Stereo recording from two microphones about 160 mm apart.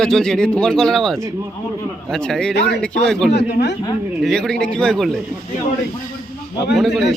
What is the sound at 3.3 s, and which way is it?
Speech, 90° left.